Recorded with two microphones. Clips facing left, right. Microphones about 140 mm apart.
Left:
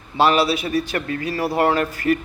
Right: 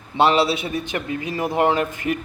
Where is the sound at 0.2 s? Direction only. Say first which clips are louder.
Even; 25° right (ahead or behind).